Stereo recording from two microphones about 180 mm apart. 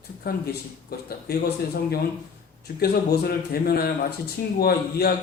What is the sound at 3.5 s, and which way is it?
A man's voice, 60° left (ahead or behind).